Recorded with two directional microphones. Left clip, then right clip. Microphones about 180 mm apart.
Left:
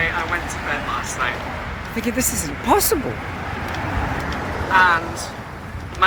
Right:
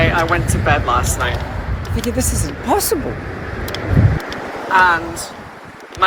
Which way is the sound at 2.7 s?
Centre (ahead or behind).